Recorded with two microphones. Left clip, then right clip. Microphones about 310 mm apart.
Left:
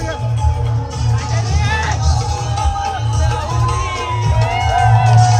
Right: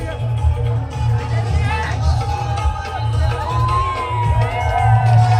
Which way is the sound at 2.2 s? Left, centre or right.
Centre.